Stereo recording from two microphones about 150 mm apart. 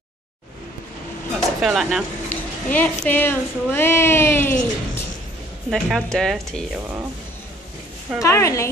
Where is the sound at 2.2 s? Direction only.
10° left (ahead or behind).